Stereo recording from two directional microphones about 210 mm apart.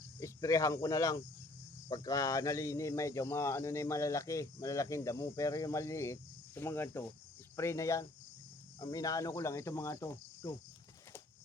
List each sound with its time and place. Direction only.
0.2 s speech: 15° left (ahead or behind)